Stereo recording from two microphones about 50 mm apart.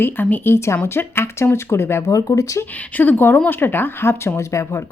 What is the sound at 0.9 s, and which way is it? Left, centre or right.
A woman's voice, left.